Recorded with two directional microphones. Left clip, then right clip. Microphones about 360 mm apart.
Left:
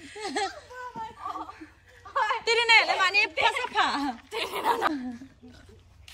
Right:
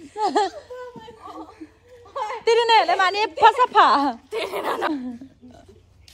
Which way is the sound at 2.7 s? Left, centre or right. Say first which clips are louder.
Right 2 dB; right.